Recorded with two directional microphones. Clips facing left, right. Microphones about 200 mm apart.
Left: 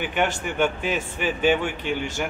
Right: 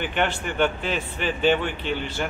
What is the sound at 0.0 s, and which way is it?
Speech, 10° left (ahead or behind).